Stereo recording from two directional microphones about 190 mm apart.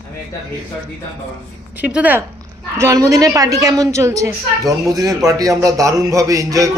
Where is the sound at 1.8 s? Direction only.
5° right (ahead or behind).